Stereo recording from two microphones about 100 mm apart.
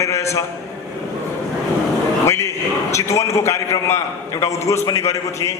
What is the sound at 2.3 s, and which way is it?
A man's voice, 30° left (ahead or behind).